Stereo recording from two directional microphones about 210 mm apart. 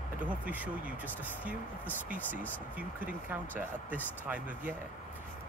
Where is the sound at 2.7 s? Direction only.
10° right (ahead or behind).